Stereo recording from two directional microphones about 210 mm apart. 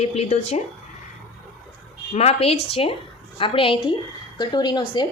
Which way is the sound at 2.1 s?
30° left (ahead or behind).